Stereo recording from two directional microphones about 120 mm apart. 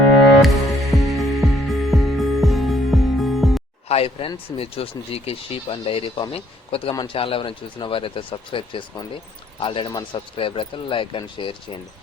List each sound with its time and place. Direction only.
0.4 s music: centre (ahead or behind)
3.8 s speech: 55° left (ahead or behind)